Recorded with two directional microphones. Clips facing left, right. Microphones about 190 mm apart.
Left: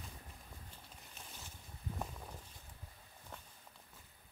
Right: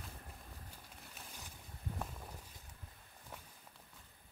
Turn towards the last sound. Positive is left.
turn(degrees=-10)  # may be behind; listen again after turning